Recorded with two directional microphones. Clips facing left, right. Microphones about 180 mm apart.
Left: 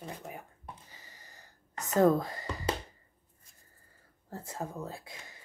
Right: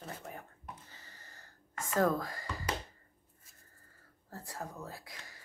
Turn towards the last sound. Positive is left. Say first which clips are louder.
# left 4 dB
turn(degrees=20)  # may be behind; listen again after turning